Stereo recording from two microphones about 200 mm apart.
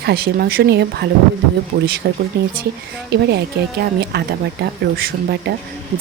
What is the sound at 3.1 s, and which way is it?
Speech, 55° right (ahead or behind).